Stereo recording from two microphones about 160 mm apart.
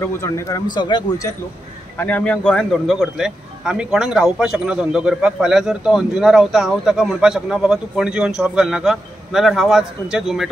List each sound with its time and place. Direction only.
0.0 s speech: 15° left (ahead or behind)
0.7 s speech: 25° left (ahead or behind)
2.0 s a man's voice: 10° left (ahead or behind)